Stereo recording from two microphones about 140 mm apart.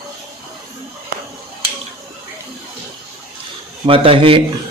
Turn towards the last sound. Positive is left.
turn(degrees=-40)  # may be behind; listen again after turning